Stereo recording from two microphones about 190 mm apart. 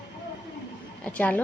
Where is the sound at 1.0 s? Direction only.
5° left (ahead or behind).